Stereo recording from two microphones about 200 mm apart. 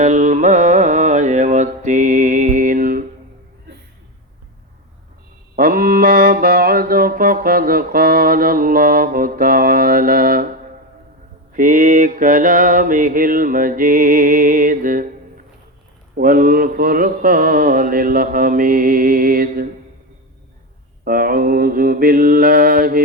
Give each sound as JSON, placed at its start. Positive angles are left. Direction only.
{"t": 0.0, "sound": "carnatic music", "side_deg": -40}
{"t": 5.5, "sound": "mantra", "side_deg": -45}
{"t": 11.5, "sound": "mantra", "side_deg": -40}
{"t": 16.1, "sound": "mantra", "side_deg": -45}
{"t": 21.0, "sound": "mantra", "side_deg": -45}